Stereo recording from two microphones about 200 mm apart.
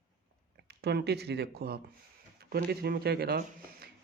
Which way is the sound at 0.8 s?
55° right (ahead or behind).